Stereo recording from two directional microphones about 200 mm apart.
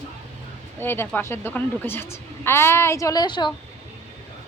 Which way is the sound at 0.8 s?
10° left (ahead or behind).